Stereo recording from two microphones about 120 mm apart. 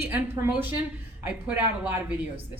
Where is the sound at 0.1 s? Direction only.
15° right (ahead or behind).